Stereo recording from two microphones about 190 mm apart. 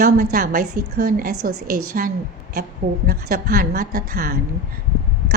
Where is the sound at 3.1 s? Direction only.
50° right (ahead or behind).